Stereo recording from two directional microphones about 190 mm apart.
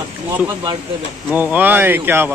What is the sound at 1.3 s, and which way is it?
Speech, 10° right (ahead or behind).